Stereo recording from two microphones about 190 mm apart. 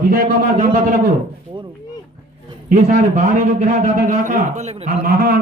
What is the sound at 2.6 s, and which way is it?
A man's voice, 35° right (ahead or behind).